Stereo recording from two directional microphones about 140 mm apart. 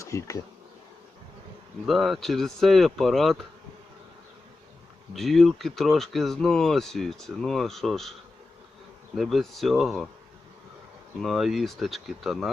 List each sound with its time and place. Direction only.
0.0 s speech: 20° left (ahead or behind)
1.9 s speech: centre (ahead or behind)
5.1 s speech: centre (ahead or behind)
9.1 s speech: centre (ahead or behind)
11.2 s speech: centre (ahead or behind)